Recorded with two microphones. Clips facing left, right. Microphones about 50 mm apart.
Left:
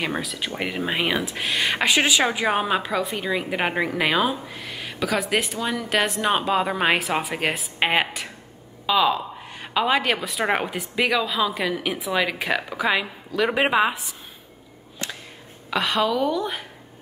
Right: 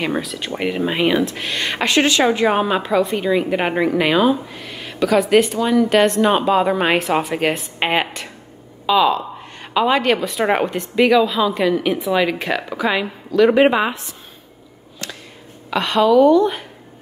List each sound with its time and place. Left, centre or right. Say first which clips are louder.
0.0 s a woman's voice: right 4 dB; centre
15.0 s a sound: right 1 dB; left
15.7 s a woman's voice: right 8 dB; centre